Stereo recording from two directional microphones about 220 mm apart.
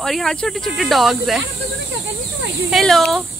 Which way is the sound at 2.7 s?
Centre (ahead or behind).